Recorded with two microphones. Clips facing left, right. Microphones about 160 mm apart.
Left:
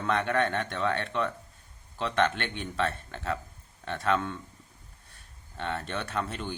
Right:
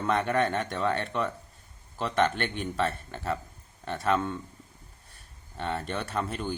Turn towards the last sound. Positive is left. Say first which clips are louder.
# right 2 dB
turn(degrees=0)  # may be behind; listen again after turning